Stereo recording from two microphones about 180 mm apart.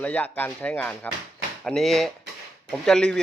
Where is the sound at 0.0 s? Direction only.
10° left (ahead or behind).